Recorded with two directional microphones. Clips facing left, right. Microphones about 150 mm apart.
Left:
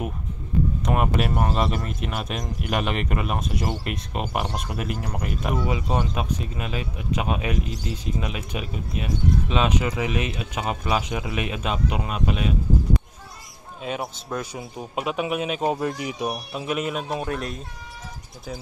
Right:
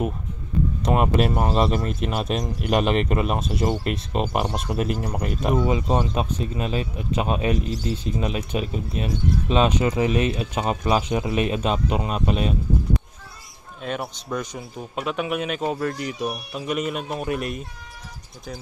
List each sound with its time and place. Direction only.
0.8 s speech: 35° right (ahead or behind)
13.8 s a man's voice: 5° left (ahead or behind)